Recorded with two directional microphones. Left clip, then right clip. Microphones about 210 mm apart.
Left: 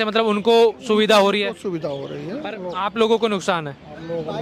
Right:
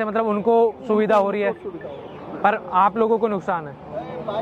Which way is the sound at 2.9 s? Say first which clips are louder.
Left 1 dB; 40° left (ahead or behind).